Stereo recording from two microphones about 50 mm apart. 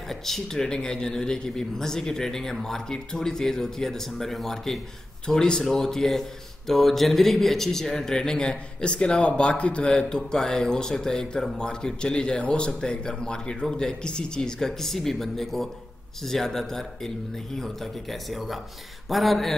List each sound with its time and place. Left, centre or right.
0.1 s speech: centre
19.0 s speech: centre